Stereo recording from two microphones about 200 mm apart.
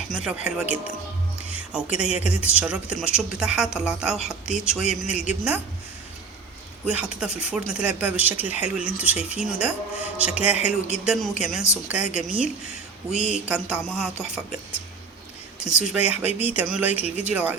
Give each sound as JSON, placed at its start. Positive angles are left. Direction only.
{"t": 0.1, "sound": "a man's voice", "side_deg": 0}
{"t": 6.8, "sound": "a man's voice", "side_deg": -5}
{"t": 13.1, "sound": "speech", "side_deg": -35}
{"t": 13.4, "sound": "a man's voice", "side_deg": -5}
{"t": 15.6, "sound": "speech", "side_deg": -5}